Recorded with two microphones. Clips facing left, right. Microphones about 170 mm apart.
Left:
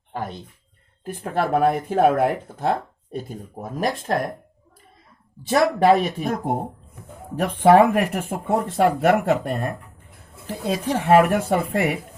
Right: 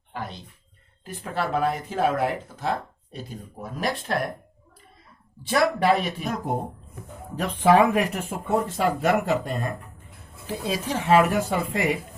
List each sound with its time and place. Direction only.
0.1 s a sound: 50° left (ahead or behind)
1.0 s speech: 55° left (ahead or behind)
5.4 s speech: 45° left (ahead or behind)
11.0 s speech: 55° left (ahead or behind)